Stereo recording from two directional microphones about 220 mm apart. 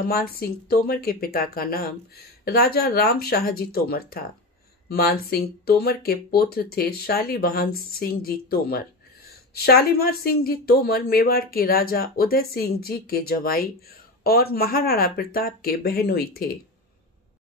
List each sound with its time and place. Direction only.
0.0 s speech: 45° left (ahead or behind)